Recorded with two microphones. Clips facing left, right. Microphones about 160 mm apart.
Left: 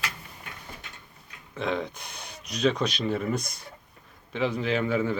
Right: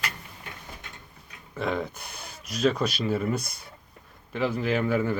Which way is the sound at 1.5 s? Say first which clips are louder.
Even; 5° right (ahead or behind).